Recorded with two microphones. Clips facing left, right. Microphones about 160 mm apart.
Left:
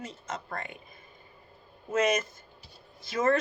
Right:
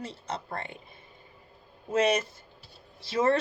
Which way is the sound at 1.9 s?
30° right (ahead or behind).